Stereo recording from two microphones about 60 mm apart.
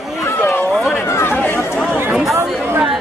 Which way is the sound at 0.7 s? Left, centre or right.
Centre.